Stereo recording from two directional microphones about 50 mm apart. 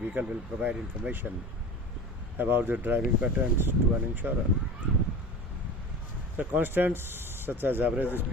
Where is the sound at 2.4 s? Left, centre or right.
Right.